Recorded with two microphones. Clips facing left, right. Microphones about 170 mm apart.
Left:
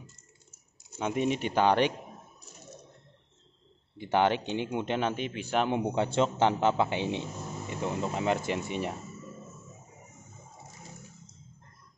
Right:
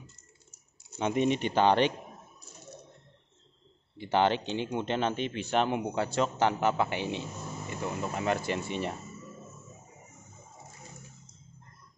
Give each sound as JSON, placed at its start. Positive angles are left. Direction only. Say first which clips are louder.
{"t": 0.9, "sound": "speech", "louder": "right 2 dB", "side_deg": 5}
{"t": 4.0, "sound": "speech", "louder": "even", "side_deg": 10}
{"t": 5.7, "sound": "a man's voice", "louder": "left 2 dB", "side_deg": 25}